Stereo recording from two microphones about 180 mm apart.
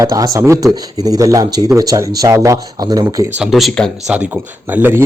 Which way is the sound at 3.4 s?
Centre (ahead or behind).